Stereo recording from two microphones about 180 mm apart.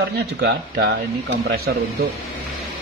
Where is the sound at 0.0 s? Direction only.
65° right (ahead or behind).